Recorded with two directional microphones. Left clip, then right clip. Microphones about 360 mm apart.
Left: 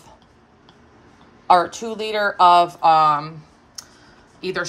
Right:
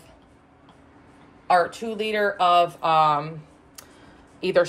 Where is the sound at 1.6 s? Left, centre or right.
Centre.